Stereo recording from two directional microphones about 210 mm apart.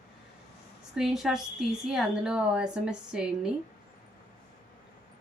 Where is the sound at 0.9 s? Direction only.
Centre (ahead or behind).